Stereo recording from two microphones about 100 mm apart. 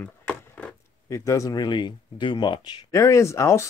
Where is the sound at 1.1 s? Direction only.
30° left (ahead or behind).